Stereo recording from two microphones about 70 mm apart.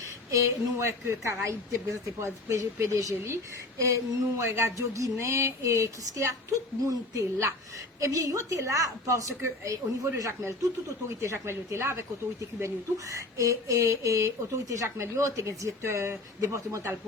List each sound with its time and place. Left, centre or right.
0.3 s speech: right
3.0 s speech: right
4.4 s speech: right